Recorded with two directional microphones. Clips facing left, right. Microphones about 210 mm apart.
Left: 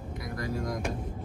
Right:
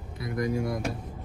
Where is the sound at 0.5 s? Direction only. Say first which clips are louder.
Right 4 dB; 10° right (ahead or behind).